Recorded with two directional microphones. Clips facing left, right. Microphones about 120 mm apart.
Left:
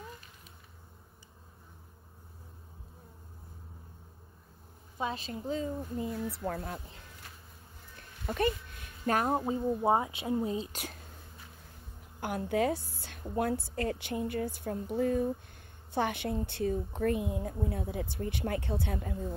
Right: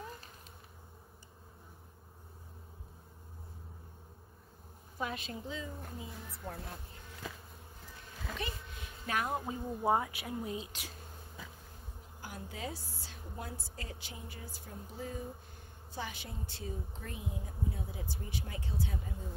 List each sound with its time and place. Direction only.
4.9 s a woman's voice: 25° left (ahead or behind)
5.5 s speech: 45° left (ahead or behind)
6.3 s speech: 90° left
9.0 s speech: 40° left (ahead or behind)
9.3 s speech: 25° left (ahead or behind)
12.2 s a woman's voice: 65° left (ahead or behind)